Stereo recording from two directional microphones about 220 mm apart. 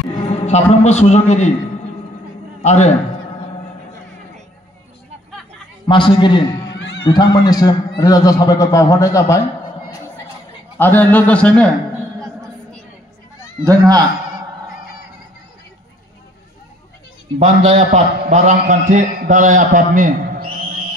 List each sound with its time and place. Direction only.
0.3 s a man's voice: 30° left (ahead or behind)
2.6 s a man's voice: 30° left (ahead or behind)
5.9 s a man's voice: 20° left (ahead or behind)
6.8 s music: 60° left (ahead or behind)
7.1 s a man's voice: 15° left (ahead or behind)
10.8 s a man's voice: 10° left (ahead or behind)
13.7 s a man's voice: 15° right (ahead or behind)
17.4 s a man's voice: 30° right (ahead or behind)